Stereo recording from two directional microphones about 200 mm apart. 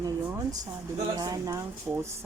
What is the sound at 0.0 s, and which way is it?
Speech, 15° right (ahead or behind).